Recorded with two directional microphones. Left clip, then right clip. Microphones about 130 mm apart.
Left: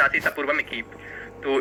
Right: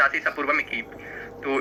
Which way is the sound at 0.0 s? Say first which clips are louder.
Left 1 dB; 30° left (ahead or behind).